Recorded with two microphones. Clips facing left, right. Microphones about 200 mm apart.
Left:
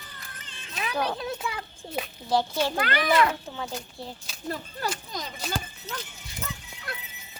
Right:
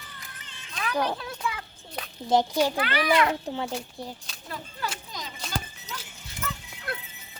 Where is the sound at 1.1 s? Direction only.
20° left (ahead or behind).